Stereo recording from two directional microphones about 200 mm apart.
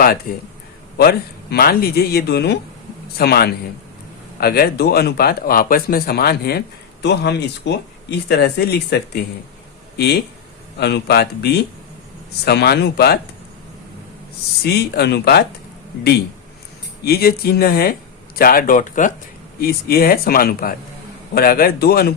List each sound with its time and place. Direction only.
0.3 s speech: 45° left (ahead or behind)
10.8 s speech: 55° left (ahead or behind)
14.6 s speech: 55° left (ahead or behind)
17.0 s speech: 50° left (ahead or behind)